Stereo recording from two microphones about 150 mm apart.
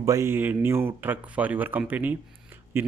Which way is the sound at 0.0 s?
20° right (ahead or behind).